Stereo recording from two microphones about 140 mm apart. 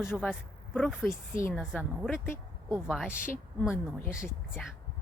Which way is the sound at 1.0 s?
15° left (ahead or behind).